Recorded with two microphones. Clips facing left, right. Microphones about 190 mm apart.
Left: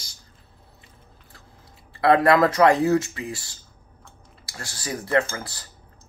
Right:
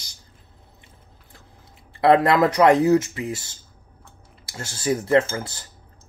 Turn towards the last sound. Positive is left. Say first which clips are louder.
# right 4 dB
turn(degrees=-20)  # may be behind; listen again after turning